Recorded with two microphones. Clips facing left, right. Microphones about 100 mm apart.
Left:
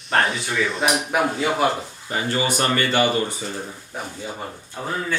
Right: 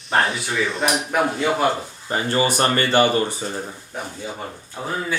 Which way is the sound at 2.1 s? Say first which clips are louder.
Right 3 dB; 35° right (ahead or behind).